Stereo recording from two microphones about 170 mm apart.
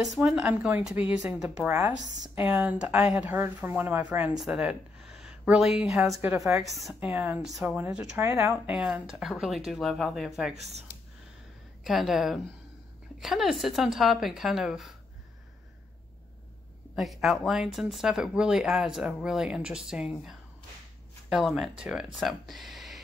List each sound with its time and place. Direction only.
0.0 s speech: centre (ahead or behind)
6.0 s speech: 15° right (ahead or behind)
6.7 s speech: centre (ahead or behind)
7.1 s speech: 15° right (ahead or behind)
7.4 s speech: centre (ahead or behind)
7.7 s speech: 10° right (ahead or behind)
10.5 s speech: 40° right (ahead or behind)
11.8 s speech: centre (ahead or behind)
16.9 s speech: centre (ahead or behind)